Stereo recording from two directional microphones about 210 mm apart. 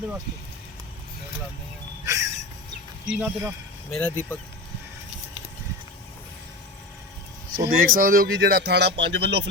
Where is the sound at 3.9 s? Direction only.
10° left (ahead or behind).